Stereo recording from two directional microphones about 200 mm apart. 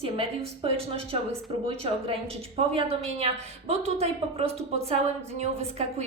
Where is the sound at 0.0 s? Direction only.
30° right (ahead or behind).